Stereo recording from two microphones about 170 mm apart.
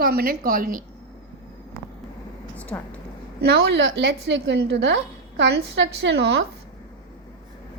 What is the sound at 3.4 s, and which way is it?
A woman's voice, 85° right.